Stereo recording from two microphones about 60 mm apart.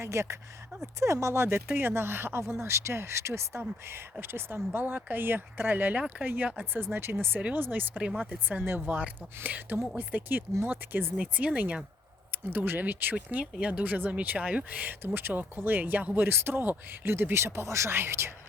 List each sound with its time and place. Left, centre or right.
0.0 s speech: right
2.5 s speech: right
3.6 s speech: right
4.8 s speech: right
11.2 s speech: right
12.5 s speech: right
13.1 s speech: centre; by 18.3 s right